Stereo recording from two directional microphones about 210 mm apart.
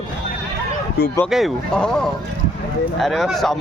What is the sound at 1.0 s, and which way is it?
Speech, 50° left (ahead or behind).